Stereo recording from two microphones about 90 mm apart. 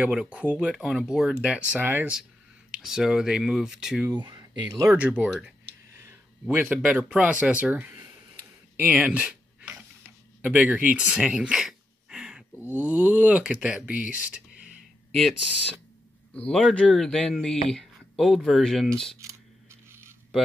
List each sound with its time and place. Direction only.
0.0 s speech: 10° right (ahead or behind)
1.7 s speech: 20° right (ahead or behind)
2.7 s speech: 5° right (ahead or behind)
4.1 s speech: 50° right (ahead or behind)
4.8 s speech: 20° right (ahead or behind)
6.5 s speech: 20° right (ahead or behind)
8.7 s a sound: 15° right (ahead or behind)
12.8 s speech: 15° right (ahead or behind)
16.3 s speech: 10° left (ahead or behind)
19.1 s a sound: 30° right (ahead or behind)